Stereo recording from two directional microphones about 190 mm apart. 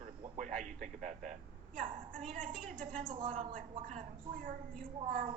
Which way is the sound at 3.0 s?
25° right (ahead or behind).